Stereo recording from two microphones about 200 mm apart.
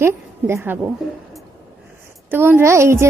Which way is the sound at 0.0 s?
10° right (ahead or behind).